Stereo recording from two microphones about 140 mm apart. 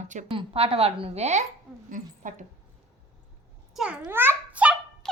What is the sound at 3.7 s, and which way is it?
Babbling, 5° right (ahead or behind).